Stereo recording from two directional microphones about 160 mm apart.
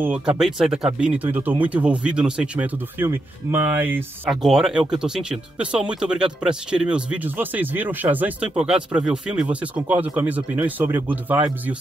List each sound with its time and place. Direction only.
0.0 s speech: 10° right (ahead or behind)
4.3 s speech: centre (ahead or behind)